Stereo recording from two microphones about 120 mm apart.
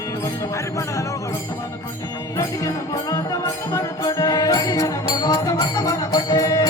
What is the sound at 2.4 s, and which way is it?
Music, 30° left (ahead or behind).